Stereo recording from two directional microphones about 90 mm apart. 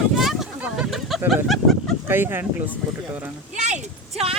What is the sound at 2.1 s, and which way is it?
Speech, 25° right (ahead or behind).